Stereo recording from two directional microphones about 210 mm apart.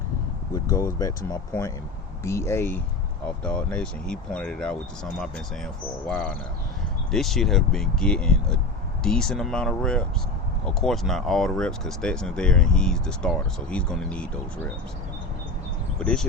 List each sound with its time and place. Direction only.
0.5 s speech: 15° left (ahead or behind)
16.0 s speech: 5° left (ahead or behind)